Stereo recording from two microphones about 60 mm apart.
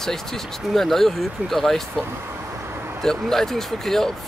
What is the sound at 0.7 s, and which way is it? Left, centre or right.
Speech, centre.